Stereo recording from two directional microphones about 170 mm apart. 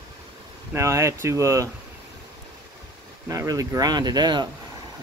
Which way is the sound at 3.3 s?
20° right (ahead or behind).